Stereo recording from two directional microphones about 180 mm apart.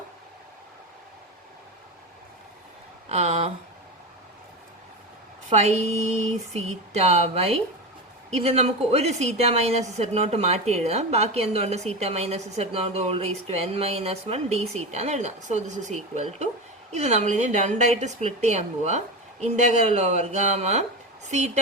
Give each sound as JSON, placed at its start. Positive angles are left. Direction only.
{"t": 3.1, "sound": "speech", "side_deg": -35}
{"t": 5.5, "sound": "a woman's voice", "side_deg": -35}